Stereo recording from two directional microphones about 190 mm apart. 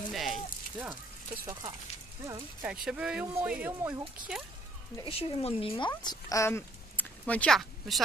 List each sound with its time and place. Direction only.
0.1 s a sound: centre (ahead or behind)
1.4 s speech: 15° right (ahead or behind)
2.6 s speech: 5° right (ahead or behind)
5.0 s speech: 30° left (ahead or behind); by 8.0 s centre (ahead or behind)